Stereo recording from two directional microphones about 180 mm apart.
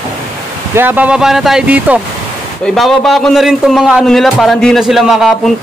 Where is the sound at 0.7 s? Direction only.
10° right (ahead or behind).